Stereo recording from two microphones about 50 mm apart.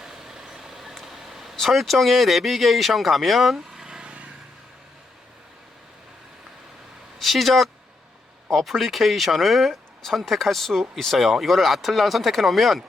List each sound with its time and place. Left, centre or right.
0.0 s vehicle: centre
1.6 s speech: centre
3.8 s vehicle: centre
7.2 s speech: centre